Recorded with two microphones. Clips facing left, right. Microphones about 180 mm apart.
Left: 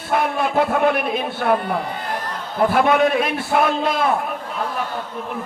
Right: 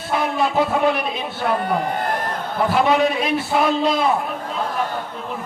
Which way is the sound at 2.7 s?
55° left (ahead or behind).